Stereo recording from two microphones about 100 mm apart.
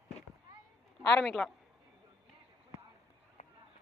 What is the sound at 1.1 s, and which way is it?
Speech, 5° left (ahead or behind).